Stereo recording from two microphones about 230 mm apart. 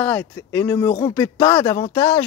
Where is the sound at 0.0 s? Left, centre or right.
Centre.